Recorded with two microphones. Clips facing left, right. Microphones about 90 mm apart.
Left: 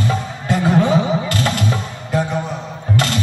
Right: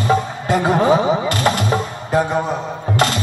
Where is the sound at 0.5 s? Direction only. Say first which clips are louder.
Right 1 dB; 35° right (ahead or behind).